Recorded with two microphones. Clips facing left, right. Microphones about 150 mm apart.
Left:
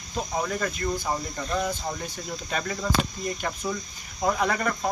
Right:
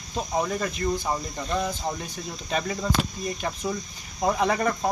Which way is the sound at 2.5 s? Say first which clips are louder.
Right 3 dB; 20° right (ahead or behind).